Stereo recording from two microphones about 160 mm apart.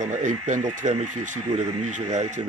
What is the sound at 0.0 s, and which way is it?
Speech, 50° right (ahead or behind).